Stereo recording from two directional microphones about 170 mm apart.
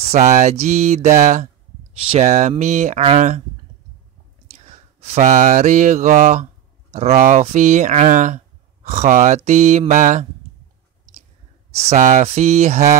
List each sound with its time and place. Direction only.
0.0 s speech: 40° right (ahead or behind)
4.5 s mantra: 40° right (ahead or behind)
6.9 s speech: 40° right (ahead or behind)
11.8 s speech: 40° right (ahead or behind)